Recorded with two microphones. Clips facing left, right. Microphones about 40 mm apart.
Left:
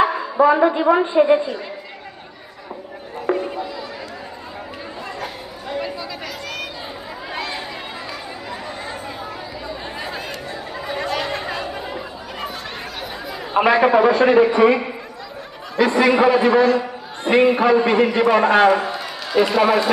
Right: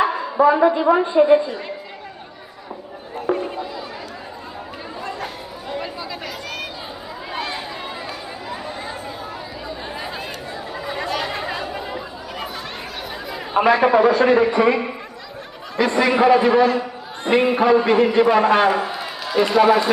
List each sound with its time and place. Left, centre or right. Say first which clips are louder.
0.0 s speech: even; centre
3.3 s music: left 1 dB; left
9.6 s a sound: even; centre
10.8 s chatter: left 1 dB; centre
13.2 s a man's voice: even; centre
15.8 s a man's voice: left 2 dB; centre